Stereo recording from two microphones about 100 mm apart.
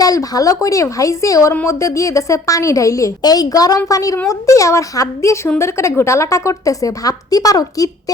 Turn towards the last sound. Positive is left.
turn(degrees=35)  # may be behind; listen again after turning